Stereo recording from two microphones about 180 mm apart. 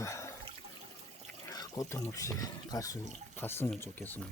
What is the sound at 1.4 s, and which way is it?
Speech, 20° left (ahead or behind).